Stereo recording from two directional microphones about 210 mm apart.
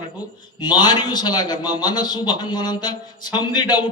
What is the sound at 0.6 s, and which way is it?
A man's voice, 20° left (ahead or behind).